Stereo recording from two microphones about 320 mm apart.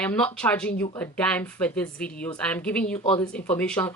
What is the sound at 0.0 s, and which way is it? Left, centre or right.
A woman's voice, centre.